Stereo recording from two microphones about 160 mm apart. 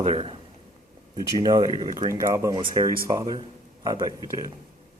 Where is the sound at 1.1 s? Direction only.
25° right (ahead or behind).